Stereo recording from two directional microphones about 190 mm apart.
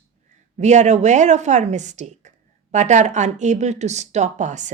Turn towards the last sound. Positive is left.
turn(degrees=-40)  # may be behind; listen again after turning